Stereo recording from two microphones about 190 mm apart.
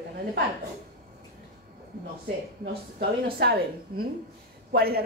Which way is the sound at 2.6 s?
55° right (ahead or behind).